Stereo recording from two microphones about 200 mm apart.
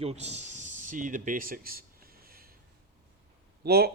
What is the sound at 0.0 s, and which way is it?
Speech, 30° right (ahead or behind).